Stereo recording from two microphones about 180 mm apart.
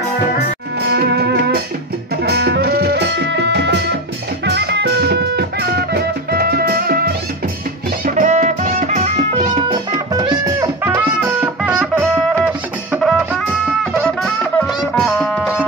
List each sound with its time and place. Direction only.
0.8 s music: 65° right (ahead or behind)
8.2 s music: 45° right (ahead or behind)
9.7 s music: 20° right (ahead or behind); by 13.4 s 5° right (ahead or behind)
15.0 s music: centre (ahead or behind)